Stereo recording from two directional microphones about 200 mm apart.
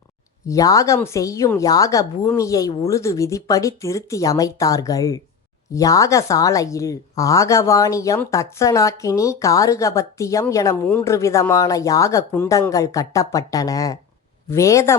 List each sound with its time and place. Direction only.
0.4 s speech: 15° left (ahead or behind)